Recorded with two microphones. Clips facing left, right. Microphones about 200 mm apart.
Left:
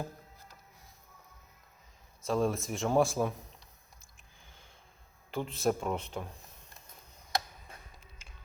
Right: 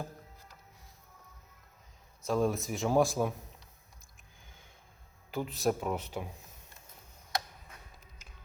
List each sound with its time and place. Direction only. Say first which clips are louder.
2.2 s speech: even; centre (ahead or behind)
5.3 s speech: even; centre (ahead or behind)
7.7 s music: left 4 dB; 30° left (ahead or behind)